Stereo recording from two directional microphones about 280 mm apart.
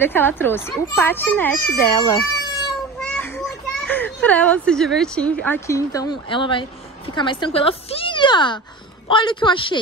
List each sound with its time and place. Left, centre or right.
0.0 s a child's voice: centre